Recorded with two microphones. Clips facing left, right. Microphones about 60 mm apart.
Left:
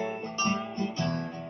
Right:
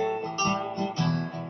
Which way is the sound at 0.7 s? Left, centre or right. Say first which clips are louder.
Right 3 dB; left.